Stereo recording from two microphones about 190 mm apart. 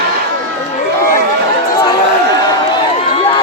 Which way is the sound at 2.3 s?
25° left (ahead or behind).